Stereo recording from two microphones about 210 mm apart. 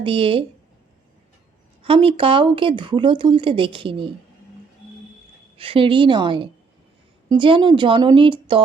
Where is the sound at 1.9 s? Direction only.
25° right (ahead or behind).